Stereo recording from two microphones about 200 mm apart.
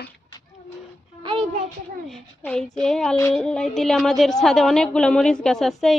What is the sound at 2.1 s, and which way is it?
A child's voice, 5° left (ahead or behind).